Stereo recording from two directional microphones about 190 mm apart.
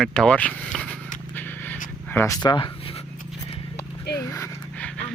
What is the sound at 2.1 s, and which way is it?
Speech, 15° left (ahead or behind).